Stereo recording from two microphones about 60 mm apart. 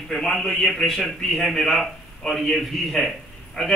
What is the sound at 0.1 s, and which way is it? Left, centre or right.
A man's voice, centre.